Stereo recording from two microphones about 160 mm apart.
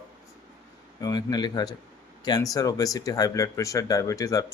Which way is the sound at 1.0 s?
25° left (ahead or behind).